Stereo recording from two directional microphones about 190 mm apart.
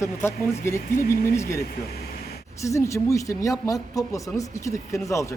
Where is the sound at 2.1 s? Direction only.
55° left (ahead or behind).